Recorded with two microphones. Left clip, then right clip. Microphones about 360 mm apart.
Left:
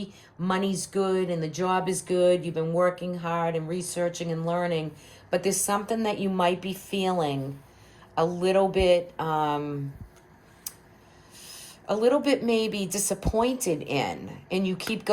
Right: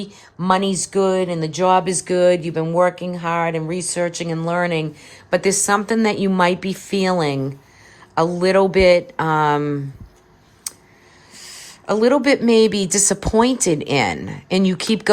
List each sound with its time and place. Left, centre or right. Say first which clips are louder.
0.5 s speech: right 10 dB; right
11.3 s speech: right 8 dB; centre